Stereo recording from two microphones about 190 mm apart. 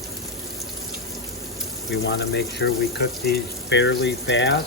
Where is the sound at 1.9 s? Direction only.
65° left (ahead or behind).